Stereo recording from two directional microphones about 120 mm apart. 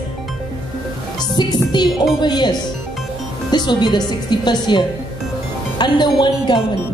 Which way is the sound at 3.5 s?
35° left (ahead or behind).